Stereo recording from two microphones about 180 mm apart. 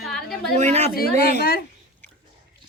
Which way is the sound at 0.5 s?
40° right (ahead or behind).